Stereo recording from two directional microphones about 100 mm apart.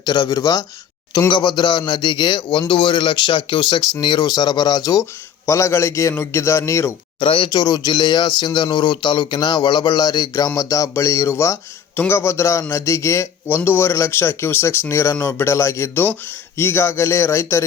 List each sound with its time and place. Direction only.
0.0 s speech: 45° left (ahead or behind)
1.3 s speech: 50° left (ahead or behind)
5.5 s a man's voice: 30° left (ahead or behind)
7.2 s a man's voice: 60° left (ahead or behind); by 17.6 s 25° left (ahead or behind)